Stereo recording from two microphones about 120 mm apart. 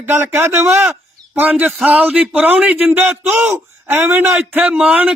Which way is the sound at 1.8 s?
10° right (ahead or behind).